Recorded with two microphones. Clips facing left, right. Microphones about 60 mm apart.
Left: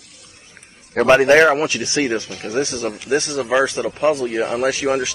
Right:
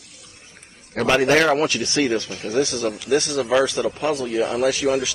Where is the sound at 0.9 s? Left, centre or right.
Left.